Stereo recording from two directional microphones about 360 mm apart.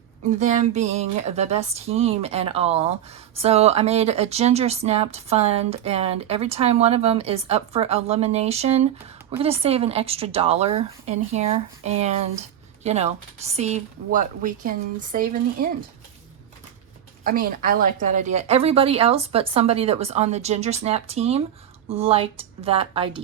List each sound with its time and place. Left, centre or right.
0.3 s speech: centre
17.2 s speech: right